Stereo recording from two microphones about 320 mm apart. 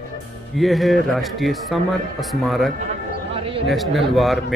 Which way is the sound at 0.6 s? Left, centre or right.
Centre.